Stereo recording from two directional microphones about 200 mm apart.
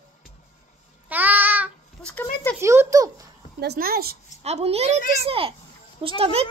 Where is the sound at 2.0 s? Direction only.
10° left (ahead or behind).